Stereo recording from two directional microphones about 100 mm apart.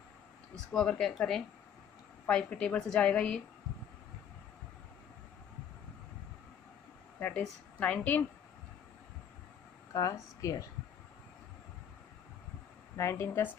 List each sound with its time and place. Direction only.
0.7 s a woman's voice: 10° left (ahead or behind)
2.2 s a woman's voice: 10° left (ahead or behind)
7.2 s a woman's voice: 20° left (ahead or behind)
9.9 s speech: 35° left (ahead or behind)
12.9 s speech: 25° left (ahead or behind)